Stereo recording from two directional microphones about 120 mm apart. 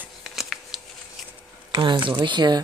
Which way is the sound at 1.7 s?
40° right (ahead or behind).